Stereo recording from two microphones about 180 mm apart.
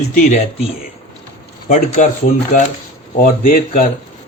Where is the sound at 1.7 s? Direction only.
40° left (ahead or behind).